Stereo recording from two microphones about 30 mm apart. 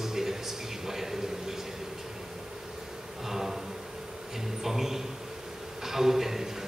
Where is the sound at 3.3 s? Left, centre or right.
Centre.